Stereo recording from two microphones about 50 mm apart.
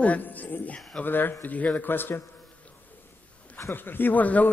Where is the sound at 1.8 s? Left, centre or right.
Left.